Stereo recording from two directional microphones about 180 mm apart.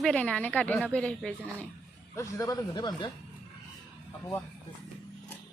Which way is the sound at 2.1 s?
15° left (ahead or behind).